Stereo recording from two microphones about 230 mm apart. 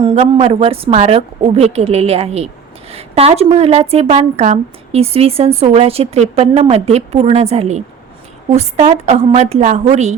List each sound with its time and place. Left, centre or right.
0.0 s a woman's voice: right